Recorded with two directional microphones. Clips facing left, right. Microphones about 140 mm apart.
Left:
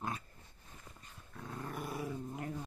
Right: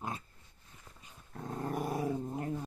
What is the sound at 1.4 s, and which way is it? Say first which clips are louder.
Dog: right 7 dB; 40° right (ahead or behind).